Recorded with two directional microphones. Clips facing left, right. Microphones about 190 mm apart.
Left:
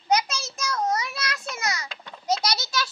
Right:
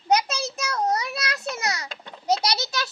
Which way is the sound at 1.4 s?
35° right (ahead or behind).